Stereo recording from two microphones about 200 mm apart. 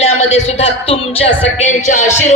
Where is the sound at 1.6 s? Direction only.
40° left (ahead or behind).